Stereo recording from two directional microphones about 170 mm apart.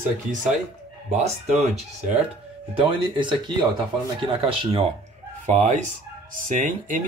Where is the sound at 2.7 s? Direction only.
30° right (ahead or behind).